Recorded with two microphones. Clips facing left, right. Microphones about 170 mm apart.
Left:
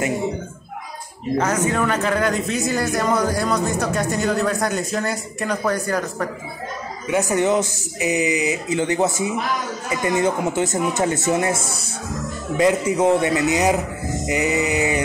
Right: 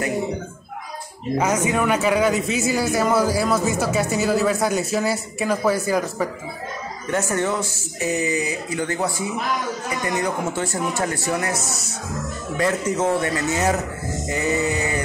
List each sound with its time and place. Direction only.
1.4 s speech: 10° right (ahead or behind)
7.1 s speech: 15° left (ahead or behind)
12.5 s a man's voice: 15° left (ahead or behind)